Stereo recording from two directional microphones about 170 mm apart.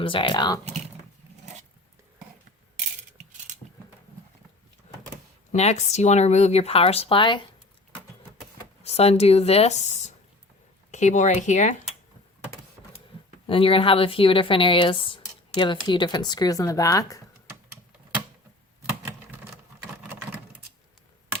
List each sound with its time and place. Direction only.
0.0 s speech: 30° left (ahead or behind)
5.5 s speech: 40° left (ahead or behind)
8.8 s speech: 40° left (ahead or behind)
13.5 s speech: 30° left (ahead or behind)